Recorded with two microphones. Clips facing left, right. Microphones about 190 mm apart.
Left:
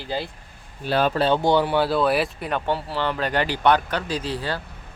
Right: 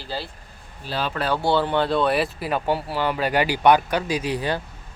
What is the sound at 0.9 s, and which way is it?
Speech, 55° left (ahead or behind).